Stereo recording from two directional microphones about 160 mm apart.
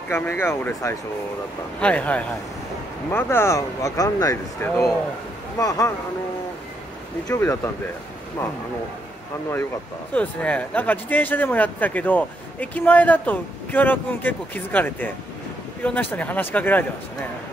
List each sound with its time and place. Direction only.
0.1 s speech: 15° left (ahead or behind)
4.6 s speech: 10° left (ahead or behind)
5.6 s speech: 20° left (ahead or behind)
7.2 s speech: 15° left (ahead or behind)
10.1 s speech: 10° left (ahead or behind)